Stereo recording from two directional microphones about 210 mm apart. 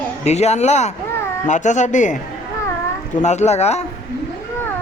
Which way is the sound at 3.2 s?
35° left (ahead or behind).